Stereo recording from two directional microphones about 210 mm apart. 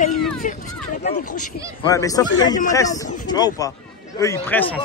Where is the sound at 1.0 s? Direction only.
45° left (ahead or behind).